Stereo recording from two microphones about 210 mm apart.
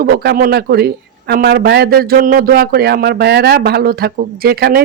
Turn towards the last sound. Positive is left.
turn(degrees=-45)  # may be behind; listen again after turning